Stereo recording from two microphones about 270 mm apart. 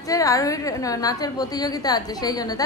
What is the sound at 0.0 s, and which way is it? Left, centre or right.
A woman's voice, centre.